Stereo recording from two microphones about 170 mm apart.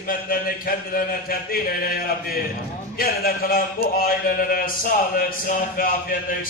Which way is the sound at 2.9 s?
60° left (ahead or behind).